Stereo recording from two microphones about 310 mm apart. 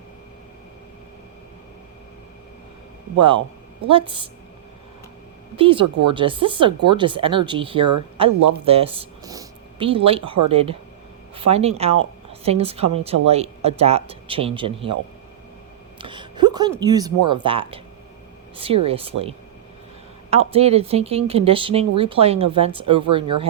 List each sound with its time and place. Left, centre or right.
3.2 s speech: centre
5.5 s speech: centre
5.8 s speech: right
6.1 s speech: centre
8.3 s speech: right
8.6 s speech: centre
16.0 s a sound: centre
16.8 s speech: centre
18.5 s a sound: centre
18.9 s speech: centre
20.3 s speech: centre